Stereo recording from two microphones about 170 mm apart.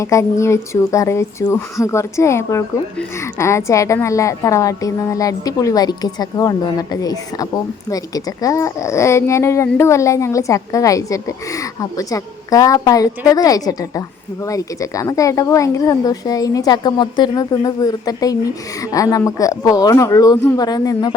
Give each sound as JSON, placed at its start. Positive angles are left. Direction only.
{"t": 0.0, "sound": "speech", "side_deg": 15}